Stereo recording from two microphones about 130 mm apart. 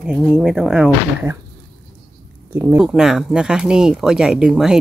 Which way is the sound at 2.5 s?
20° right (ahead or behind).